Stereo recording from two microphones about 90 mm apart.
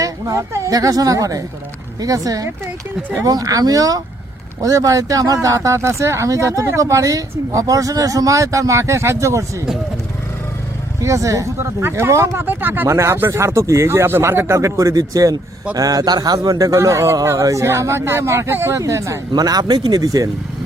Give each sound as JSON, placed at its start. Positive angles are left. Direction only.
{"t": 0.0, "sound": "a man's voice", "side_deg": -40}
{"t": 11.0, "sound": "a man's voice", "side_deg": -35}
{"t": 19.3, "sound": "a man's voice", "side_deg": -45}